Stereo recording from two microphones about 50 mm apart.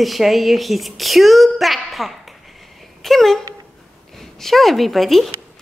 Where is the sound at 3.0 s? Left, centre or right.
Centre.